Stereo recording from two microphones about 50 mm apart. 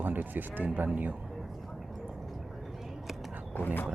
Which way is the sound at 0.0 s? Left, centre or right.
Right.